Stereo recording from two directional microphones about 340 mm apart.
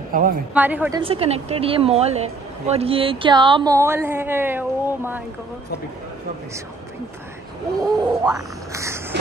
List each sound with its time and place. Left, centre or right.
0.1 s speech: right
0.6 s a woman's voice: centre
7.8 s a sound: centre